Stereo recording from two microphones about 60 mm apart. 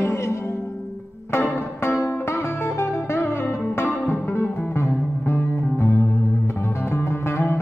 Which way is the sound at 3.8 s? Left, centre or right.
Centre.